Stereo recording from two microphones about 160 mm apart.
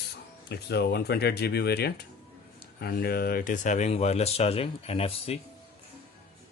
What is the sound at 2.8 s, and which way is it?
Speech, 75° left (ahead or behind).